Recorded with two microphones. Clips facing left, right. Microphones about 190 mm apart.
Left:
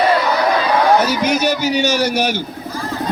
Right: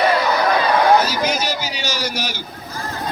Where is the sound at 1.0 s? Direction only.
65° left (ahead or behind).